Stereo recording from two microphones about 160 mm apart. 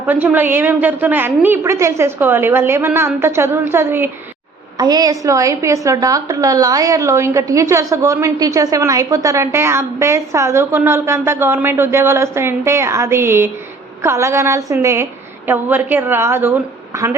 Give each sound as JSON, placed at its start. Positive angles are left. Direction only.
{"t": 0.0, "sound": "a woman's voice", "side_deg": -10}
{"t": 4.8, "sound": "a woman's voice", "side_deg": -25}